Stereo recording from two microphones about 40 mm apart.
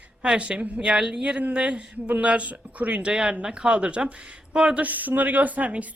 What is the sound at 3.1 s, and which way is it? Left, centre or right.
Speech, right.